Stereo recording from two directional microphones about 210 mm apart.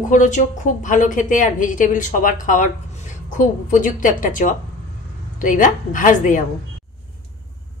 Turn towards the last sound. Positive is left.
turn(degrees=40)  # may be behind; listen again after turning